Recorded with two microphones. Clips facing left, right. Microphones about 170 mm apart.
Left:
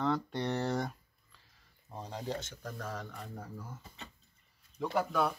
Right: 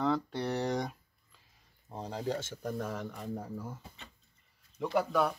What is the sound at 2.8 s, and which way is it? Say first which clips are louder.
Speech: right 4 dB; 10° right (ahead or behind).